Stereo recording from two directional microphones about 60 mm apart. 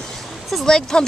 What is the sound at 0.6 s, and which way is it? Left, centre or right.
Speech, centre.